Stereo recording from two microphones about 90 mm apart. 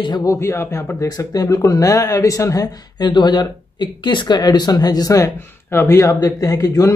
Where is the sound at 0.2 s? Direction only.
35° left (ahead or behind).